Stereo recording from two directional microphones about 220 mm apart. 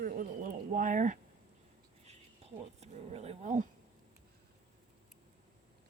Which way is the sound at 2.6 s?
30° right (ahead or behind).